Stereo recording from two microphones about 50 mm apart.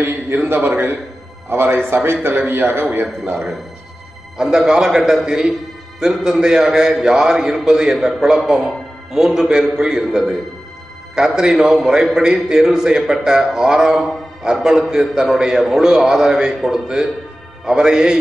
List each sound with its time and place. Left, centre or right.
0.7 s a man's voice: right
4.4 s a man's voice: centre